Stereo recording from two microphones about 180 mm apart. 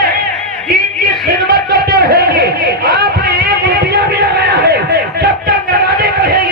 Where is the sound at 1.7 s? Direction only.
60° right (ahead or behind).